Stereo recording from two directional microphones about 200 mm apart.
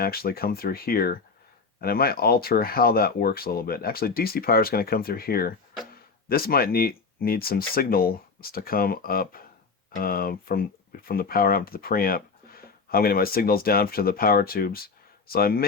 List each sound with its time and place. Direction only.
0.0 s speech: 50° left (ahead or behind)